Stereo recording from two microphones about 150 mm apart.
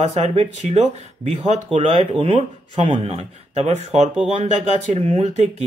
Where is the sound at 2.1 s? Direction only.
35° right (ahead or behind).